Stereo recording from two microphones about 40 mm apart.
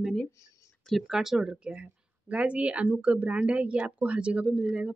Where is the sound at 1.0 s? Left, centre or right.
Centre.